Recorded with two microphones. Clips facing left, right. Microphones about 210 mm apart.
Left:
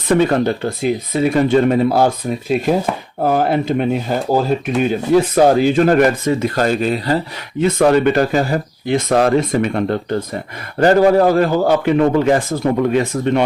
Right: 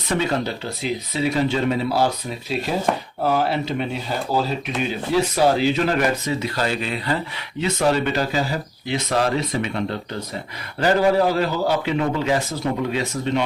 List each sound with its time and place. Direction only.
0.1 s speech: 55° left (ahead or behind)
7.6 s speech: 55° left (ahead or behind)